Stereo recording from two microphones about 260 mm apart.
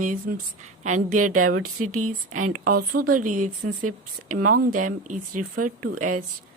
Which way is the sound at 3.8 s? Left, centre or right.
Right.